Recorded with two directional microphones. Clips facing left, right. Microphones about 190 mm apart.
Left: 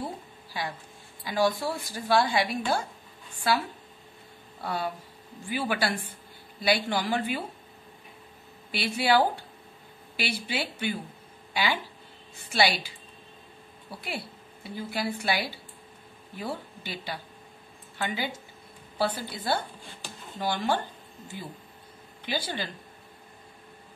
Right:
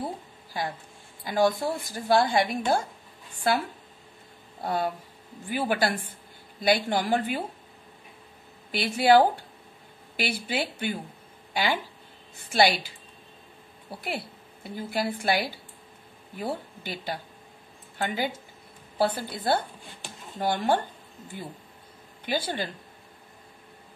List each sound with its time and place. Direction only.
0.5 s a woman's voice: 45° right (ahead or behind)
4.6 s a woman's voice: 50° right (ahead or behind)
8.7 s a woman's voice: 50° right (ahead or behind)
14.0 s a woman's voice: 50° right (ahead or behind)